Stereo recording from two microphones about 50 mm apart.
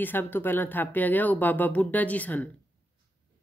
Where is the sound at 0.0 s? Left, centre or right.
Left.